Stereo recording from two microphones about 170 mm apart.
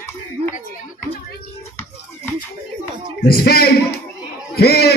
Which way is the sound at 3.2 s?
60° left (ahead or behind).